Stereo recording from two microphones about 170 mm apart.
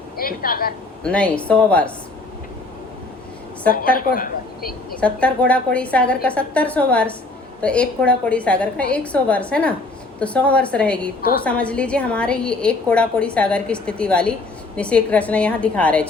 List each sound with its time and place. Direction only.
0.2 s a woman's voice: 60° left (ahead or behind)
1.0 s a woman's voice: 5° left (ahead or behind)
3.9 s a woman's voice: 55° left (ahead or behind)
4.9 s a woman's voice: 5° left (ahead or behind)